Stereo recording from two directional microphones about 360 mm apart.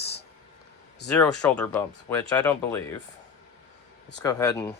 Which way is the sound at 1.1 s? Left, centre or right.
Centre.